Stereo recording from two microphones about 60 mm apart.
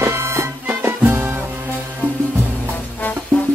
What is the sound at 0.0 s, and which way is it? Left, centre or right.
Music, right.